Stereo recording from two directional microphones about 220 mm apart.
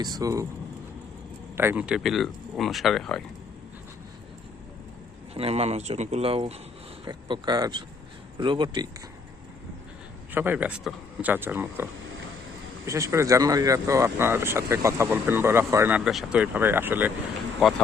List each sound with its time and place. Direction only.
0.0 s speech: 15° right (ahead or behind)
1.5 s speech: 10° right (ahead or behind)
5.3 s speech: 25° right (ahead or behind)
10.3 s speech: 10° right (ahead or behind)